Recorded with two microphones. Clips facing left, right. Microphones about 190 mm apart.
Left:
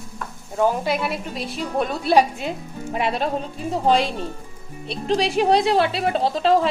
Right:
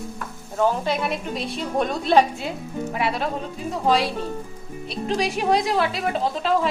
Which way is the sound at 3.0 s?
25° left (ahead or behind).